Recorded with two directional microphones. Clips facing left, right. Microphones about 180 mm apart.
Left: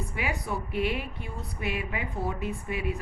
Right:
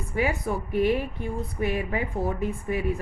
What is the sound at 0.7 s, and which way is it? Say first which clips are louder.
Speech: right 8 dB; 45° right (ahead or behind).